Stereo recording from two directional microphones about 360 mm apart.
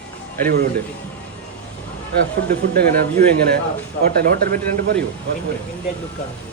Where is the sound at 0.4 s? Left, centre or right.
Right.